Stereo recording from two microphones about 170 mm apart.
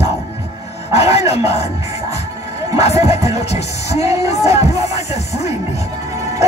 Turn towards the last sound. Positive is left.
turn(degrees=40)  # may be behind; listen again after turning